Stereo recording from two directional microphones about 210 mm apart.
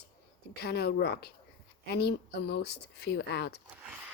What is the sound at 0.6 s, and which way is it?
Speech, 50° left (ahead or behind).